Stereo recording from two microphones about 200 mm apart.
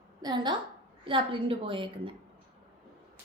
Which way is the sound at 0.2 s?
20° right (ahead or behind).